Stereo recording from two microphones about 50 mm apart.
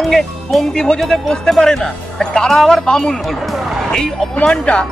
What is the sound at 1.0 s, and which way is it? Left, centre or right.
Speech, centre.